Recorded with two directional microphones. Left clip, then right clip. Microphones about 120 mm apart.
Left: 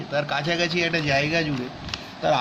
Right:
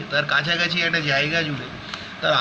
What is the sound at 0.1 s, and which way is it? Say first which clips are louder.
Speech: right 4 dB; 20° left (ahead or behind).